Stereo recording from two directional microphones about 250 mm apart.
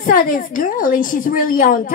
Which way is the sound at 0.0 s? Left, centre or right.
Left.